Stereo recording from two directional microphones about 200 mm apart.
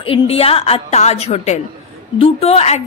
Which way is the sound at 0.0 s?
30° left (ahead or behind).